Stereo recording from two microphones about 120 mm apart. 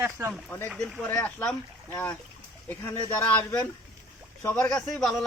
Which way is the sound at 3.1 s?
15° left (ahead or behind).